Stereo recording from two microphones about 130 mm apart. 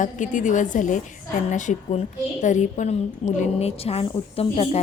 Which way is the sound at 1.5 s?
70° left (ahead or behind).